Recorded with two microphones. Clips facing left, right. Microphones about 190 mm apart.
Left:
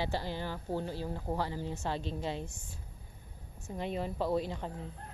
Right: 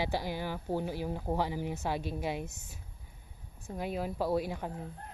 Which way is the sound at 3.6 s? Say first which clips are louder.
Right 1 dB; 5° right (ahead or behind).